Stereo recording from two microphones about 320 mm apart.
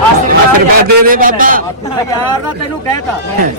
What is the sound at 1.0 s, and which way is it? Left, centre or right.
Speech, right.